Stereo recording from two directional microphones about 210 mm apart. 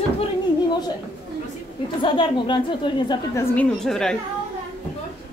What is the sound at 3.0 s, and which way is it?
A woman's voice, 10° left (ahead or behind).